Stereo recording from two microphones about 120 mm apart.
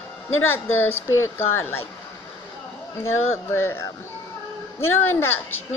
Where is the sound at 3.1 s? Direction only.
20° left (ahead or behind).